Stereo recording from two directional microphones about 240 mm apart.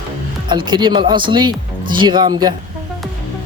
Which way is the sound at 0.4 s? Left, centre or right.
Centre.